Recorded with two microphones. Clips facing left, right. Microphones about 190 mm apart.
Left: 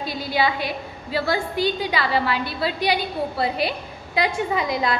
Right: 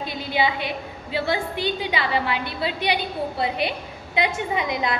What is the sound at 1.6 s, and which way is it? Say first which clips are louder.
A woman's voice: left 2 dB; 35° left (ahead or behind).